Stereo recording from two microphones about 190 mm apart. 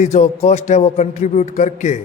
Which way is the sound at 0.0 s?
35° left (ahead or behind).